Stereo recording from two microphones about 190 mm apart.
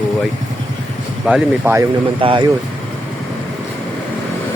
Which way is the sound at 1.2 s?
5° right (ahead or behind).